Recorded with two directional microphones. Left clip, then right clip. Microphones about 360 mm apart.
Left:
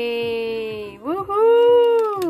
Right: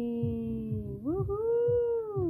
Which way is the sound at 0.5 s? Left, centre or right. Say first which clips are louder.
Left 13 dB; left.